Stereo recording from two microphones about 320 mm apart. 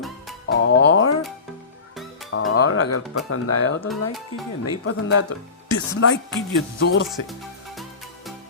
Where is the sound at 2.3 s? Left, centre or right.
Left.